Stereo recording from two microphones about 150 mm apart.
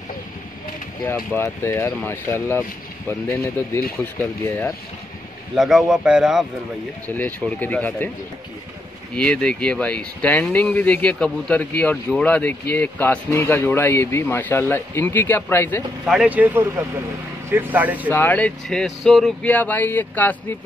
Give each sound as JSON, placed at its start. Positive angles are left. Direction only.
{"t": 1.0, "sound": "speech", "side_deg": 15}
{"t": 5.6, "sound": "a man's voice", "side_deg": 0}
{"t": 7.1, "sound": "speech", "side_deg": 10}
{"t": 9.1, "sound": "speech", "side_deg": 5}
{"t": 16.1, "sound": "speech", "side_deg": -10}
{"t": 18.1, "sound": "speech", "side_deg": 10}